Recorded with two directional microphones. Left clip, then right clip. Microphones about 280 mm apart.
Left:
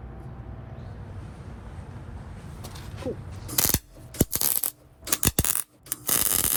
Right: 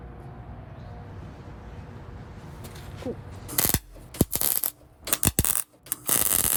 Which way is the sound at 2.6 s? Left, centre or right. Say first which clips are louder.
Left 1 dB; left.